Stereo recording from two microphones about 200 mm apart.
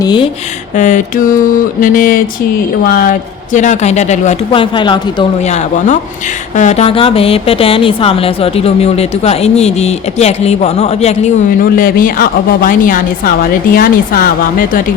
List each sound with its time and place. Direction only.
0.0 s speech: 25° left (ahead or behind)
0.8 s speech: 40° left (ahead or behind)
6.6 s speech: 35° left (ahead or behind)